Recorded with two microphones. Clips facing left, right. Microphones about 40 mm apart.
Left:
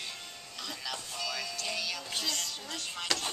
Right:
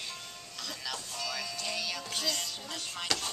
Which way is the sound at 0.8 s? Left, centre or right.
Centre.